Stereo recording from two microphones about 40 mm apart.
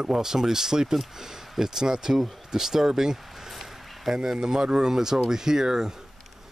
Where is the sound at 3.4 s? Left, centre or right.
Centre.